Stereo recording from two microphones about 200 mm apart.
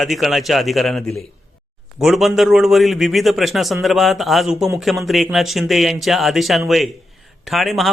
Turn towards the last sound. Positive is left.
turn(degrees=0)  # may be behind; listen again after turning